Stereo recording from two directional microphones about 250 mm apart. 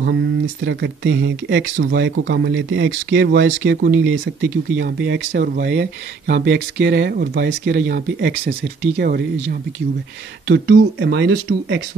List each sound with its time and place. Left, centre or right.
0.0 s speech: right